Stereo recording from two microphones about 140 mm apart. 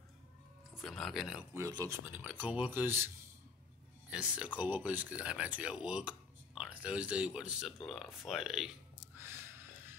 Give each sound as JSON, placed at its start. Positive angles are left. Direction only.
{"t": 0.7, "sound": "speech", "side_deg": 0}
{"t": 1.5, "sound": "speech", "side_deg": -25}
{"t": 2.0, "sound": "speech", "side_deg": -15}
{"t": 4.1, "sound": "speech", "side_deg": -5}